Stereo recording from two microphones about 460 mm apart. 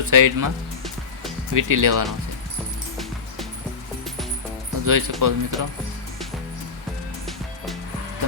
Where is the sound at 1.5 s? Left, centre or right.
Right.